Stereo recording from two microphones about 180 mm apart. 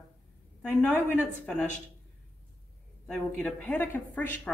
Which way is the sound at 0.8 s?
10° left (ahead or behind).